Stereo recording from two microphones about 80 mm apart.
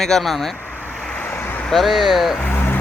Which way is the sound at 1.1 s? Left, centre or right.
Left.